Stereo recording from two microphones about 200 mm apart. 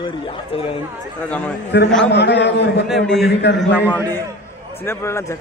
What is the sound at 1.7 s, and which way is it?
Speech, 60° left (ahead or behind).